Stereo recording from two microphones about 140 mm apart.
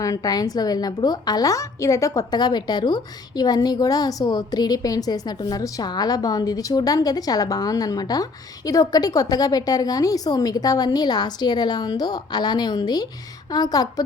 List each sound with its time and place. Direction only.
0.0 s a woman's voice: 25° left (ahead or behind)